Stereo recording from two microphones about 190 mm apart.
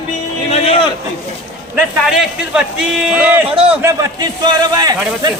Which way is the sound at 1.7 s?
5° right (ahead or behind).